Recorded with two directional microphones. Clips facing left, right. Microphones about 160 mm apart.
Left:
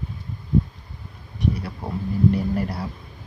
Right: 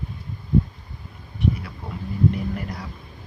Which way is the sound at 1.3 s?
40° left (ahead or behind).